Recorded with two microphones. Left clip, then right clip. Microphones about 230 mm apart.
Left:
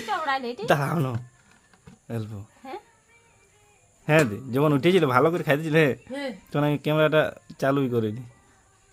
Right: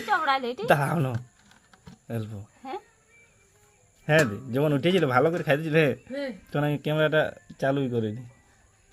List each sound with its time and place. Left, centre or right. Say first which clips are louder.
0.1 s a woman's voice: right 2 dB; right
0.7 s a man's voice: even; centre
2.6 s insect: right 2 dB; right
4.0 s a man's voice: left 1 dB; centre